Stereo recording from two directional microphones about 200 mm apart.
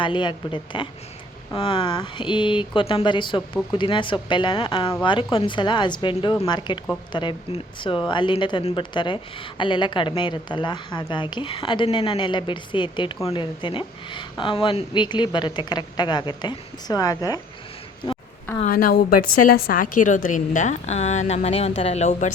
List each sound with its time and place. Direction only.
0.0 s speech: 25° left (ahead or behind)
18.6 s a woman's voice: 45° left (ahead or behind)